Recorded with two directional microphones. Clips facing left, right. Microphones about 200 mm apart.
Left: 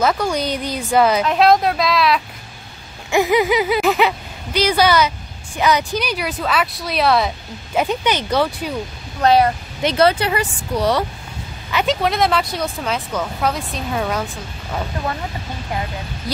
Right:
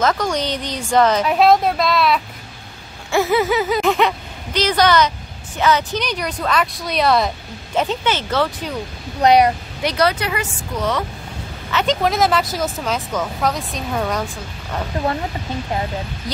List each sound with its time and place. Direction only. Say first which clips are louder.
0.0 s speech: left 1 dB; 10° left (ahead or behind)
1.2 s speech: even; 5° right (ahead or behind)
3.1 s speech: left 1 dB; 15° left (ahead or behind)
9.2 s speech: right 1 dB; 15° right (ahead or behind)
9.8 s speech: left 3 dB; 25° left (ahead or behind)
11.7 s speech: even; 5° left (ahead or behind)